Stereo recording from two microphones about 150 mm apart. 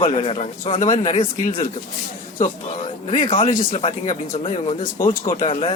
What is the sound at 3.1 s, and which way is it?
Speech, 55° left (ahead or behind).